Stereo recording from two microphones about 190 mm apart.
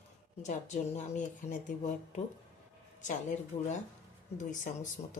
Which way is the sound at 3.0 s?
40° left (ahead or behind).